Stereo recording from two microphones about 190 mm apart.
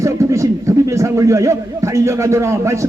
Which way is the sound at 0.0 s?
15° right (ahead or behind).